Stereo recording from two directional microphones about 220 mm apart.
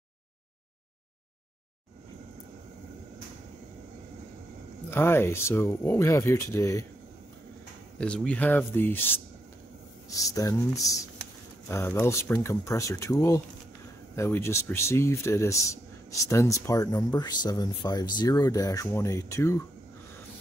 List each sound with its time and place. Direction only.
4.9 s speech: 10° left (ahead or behind)
8.0 s speech: 5° left (ahead or behind)